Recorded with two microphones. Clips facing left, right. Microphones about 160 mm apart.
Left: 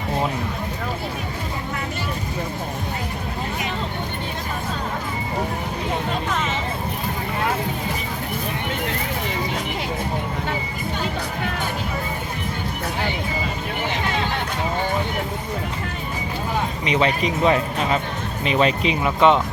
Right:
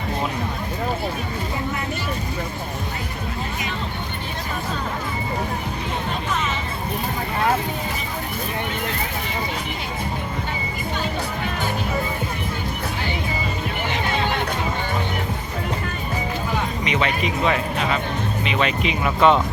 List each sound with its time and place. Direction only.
16.8 s speech: 30° left (ahead or behind)
19.0 s speech: 20° left (ahead or behind)